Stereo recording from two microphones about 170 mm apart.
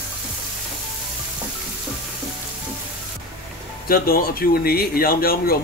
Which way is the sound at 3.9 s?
60° left (ahead or behind).